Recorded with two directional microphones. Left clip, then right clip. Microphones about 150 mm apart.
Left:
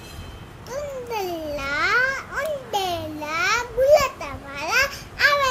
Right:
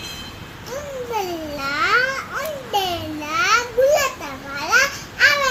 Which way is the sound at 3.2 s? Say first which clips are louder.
Right 5 dB; 15° left (ahead or behind).